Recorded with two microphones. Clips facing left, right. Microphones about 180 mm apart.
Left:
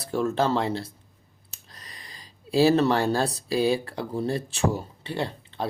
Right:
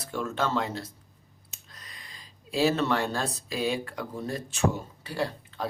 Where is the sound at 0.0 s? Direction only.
35° left (ahead or behind).